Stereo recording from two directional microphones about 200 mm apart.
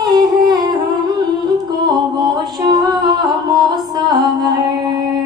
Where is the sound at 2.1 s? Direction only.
20° right (ahead or behind).